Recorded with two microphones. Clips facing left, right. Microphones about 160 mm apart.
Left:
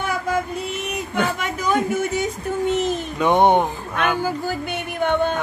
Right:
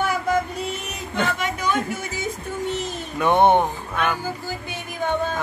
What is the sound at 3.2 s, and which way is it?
Speech, 15° left (ahead or behind).